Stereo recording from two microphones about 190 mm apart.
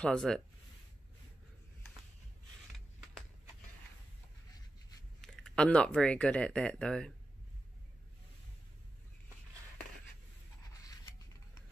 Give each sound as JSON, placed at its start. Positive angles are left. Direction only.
{"t": 0.0, "sound": "speech", "side_deg": 5}
{"t": 5.2, "sound": "speech", "side_deg": 5}
{"t": 10.7, "sound": "scissors", "side_deg": 20}